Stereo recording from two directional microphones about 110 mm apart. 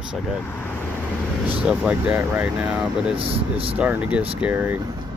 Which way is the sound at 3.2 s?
55° right (ahead or behind).